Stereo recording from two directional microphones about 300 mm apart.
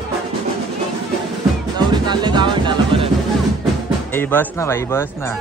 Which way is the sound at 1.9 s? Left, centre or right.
Centre.